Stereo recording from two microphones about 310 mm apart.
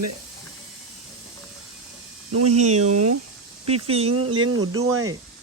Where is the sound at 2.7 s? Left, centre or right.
Right.